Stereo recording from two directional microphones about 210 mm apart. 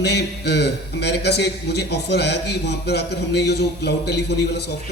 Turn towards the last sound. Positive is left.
turn(degrees=55)  # may be behind; listen again after turning